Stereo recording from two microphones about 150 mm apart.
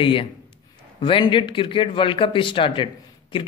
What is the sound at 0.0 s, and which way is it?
A man's voice, 35° left (ahead or behind).